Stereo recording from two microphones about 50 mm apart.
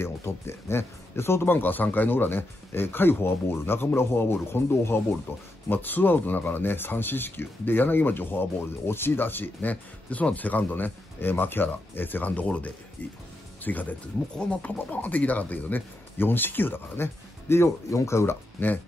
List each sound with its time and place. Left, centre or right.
0.0 s speech: left
5.7 s speech: left
14.3 s speech: left
18.6 s speech: left